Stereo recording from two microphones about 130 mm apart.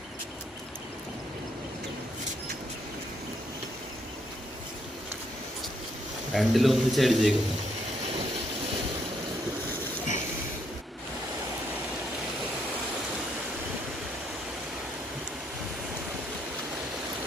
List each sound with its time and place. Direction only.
6.3 s a man's voice: centre (ahead or behind)